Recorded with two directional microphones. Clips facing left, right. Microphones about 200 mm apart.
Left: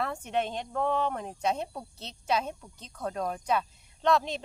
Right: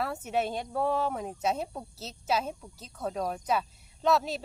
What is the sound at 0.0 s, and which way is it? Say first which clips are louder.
Speech: even; 5° right (ahead or behind).